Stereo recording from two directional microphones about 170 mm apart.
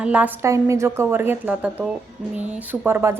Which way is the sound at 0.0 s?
5° right (ahead or behind).